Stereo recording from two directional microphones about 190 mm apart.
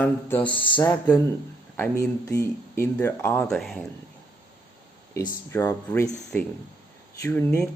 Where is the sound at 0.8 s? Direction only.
10° left (ahead or behind).